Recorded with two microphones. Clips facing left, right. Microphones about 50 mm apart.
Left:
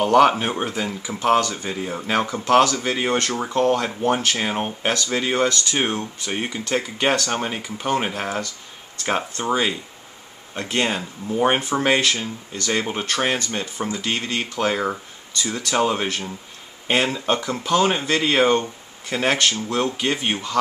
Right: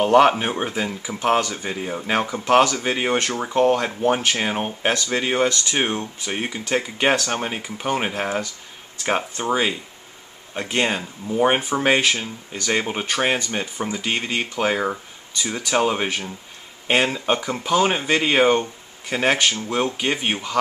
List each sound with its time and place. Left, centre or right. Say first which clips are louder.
0.0 s speech: even; centre
6.3 s speech: even; centre
8.1 s speech: right 2 dB; centre
11.0 s speech: right 1 dB; centre
11.8 s speech: right 1 dB; centre